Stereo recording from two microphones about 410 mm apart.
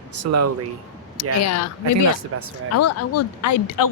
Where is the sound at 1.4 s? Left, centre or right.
Left.